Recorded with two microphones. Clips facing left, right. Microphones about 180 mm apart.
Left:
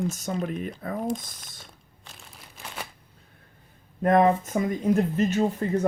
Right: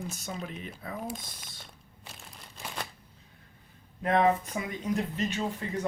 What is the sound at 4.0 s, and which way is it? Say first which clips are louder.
Speech: left 5 dB; 45° left (ahead or behind).